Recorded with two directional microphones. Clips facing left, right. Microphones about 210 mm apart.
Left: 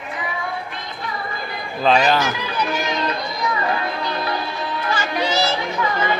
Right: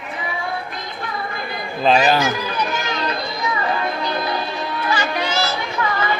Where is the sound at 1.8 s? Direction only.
5° right (ahead or behind).